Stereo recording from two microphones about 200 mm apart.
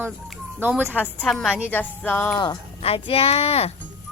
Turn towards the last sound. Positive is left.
turn(degrees=30)  # may be behind; listen again after turning